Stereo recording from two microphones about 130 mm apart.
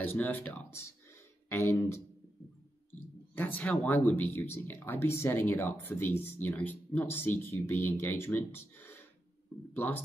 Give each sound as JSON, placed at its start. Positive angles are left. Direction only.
{"t": 0.0, "sound": "speech", "side_deg": 15}
{"t": 2.9, "sound": "a sound", "side_deg": 15}
{"t": 3.8, "sound": "speech", "side_deg": 15}